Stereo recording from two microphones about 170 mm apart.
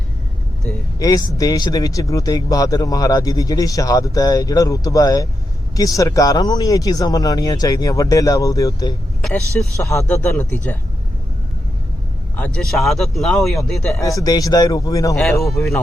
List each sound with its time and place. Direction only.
0.9 s a man's voice: 20° left (ahead or behind)
9.2 s speech: 5° left (ahead or behind)
9.8 s speech: 15° left (ahead or behind)
12.5 s speech: centre (ahead or behind)
14.0 s speech: 20° left (ahead or behind)
15.2 s speech: centre (ahead or behind)